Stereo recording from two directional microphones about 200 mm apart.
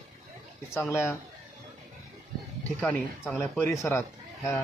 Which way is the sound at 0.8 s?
10° left (ahead or behind).